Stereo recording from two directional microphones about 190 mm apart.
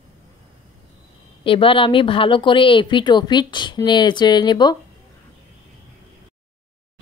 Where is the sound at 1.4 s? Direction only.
30° left (ahead or behind).